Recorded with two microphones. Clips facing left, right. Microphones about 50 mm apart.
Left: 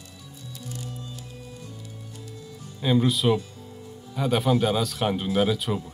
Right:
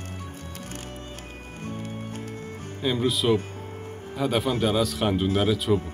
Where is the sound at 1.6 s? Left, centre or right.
Right.